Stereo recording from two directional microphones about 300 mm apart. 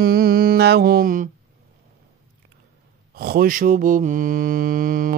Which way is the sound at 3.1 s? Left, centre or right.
Right.